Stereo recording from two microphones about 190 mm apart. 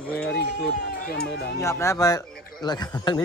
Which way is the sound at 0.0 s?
5° left (ahead or behind).